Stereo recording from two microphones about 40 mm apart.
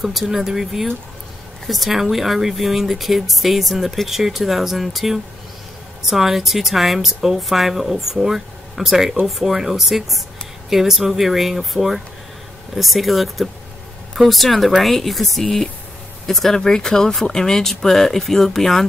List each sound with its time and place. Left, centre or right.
0.0 s speech: centre